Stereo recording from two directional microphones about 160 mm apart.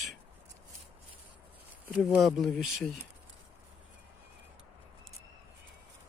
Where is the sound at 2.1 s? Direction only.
Centre (ahead or behind).